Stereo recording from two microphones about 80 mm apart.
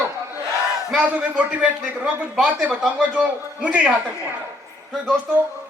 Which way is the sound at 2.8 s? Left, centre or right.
Centre.